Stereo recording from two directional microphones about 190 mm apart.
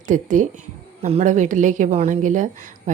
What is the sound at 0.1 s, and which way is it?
A woman's voice, 40° right (ahead or behind).